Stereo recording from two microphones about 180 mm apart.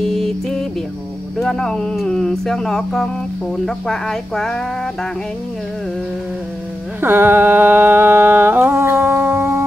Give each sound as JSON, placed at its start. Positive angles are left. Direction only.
{"t": 0.0, "sound": "a sound", "side_deg": 0}
{"t": 1.4, "sound": "speech", "side_deg": 0}
{"t": 7.0, "sound": "humming", "side_deg": -10}